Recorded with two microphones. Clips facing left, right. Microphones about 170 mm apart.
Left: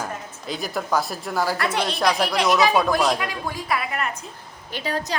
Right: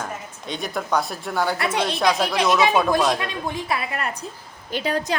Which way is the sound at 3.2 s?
25° right (ahead or behind).